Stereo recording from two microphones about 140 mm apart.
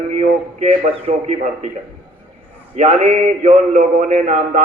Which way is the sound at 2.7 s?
55° right (ahead or behind).